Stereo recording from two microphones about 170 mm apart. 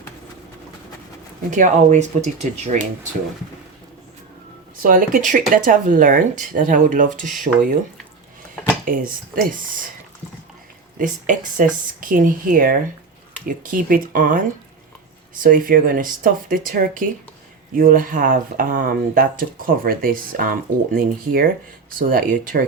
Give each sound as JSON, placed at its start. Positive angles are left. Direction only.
{"t": 1.5, "sound": "speech", "side_deg": -45}
{"t": 4.8, "sound": "speech", "side_deg": -55}
{"t": 8.8, "sound": "speech", "side_deg": -55}
{"t": 10.9, "sound": "speech", "side_deg": -50}